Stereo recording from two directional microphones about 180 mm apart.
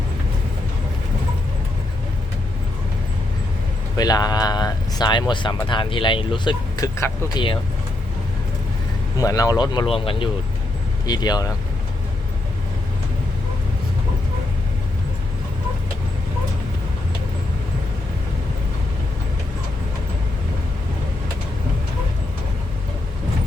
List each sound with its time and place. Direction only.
3.9 s speech: 20° left (ahead or behind)
9.1 s speech: 20° left (ahead or behind)